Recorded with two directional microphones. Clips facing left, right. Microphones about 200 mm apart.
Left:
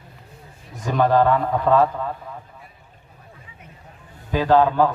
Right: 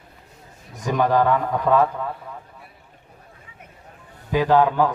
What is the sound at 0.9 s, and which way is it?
Speech, 15° right (ahead or behind).